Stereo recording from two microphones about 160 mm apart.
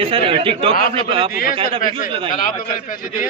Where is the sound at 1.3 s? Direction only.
65° left (ahead or behind).